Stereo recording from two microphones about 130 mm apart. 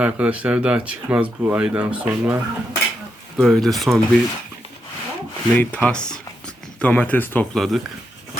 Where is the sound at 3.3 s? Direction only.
Centre (ahead or behind).